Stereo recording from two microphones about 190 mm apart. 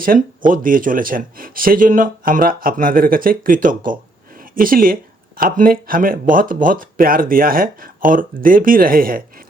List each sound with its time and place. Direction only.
0.0 s speech: 45° right (ahead or behind)